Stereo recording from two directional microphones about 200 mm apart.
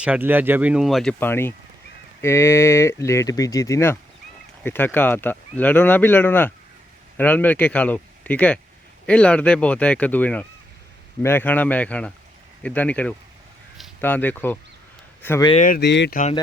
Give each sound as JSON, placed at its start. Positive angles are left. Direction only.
{"t": 0.0, "sound": "speech", "side_deg": -10}
{"t": 1.2, "sound": "speech", "side_deg": 10}
{"t": 15.6, "sound": "speech", "side_deg": 45}
{"t": 15.9, "sound": "speech", "side_deg": 60}